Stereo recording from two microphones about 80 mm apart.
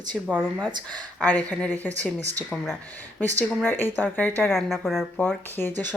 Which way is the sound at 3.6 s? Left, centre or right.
Left.